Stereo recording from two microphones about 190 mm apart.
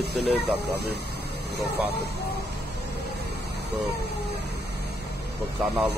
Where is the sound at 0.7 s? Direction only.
60° right (ahead or behind).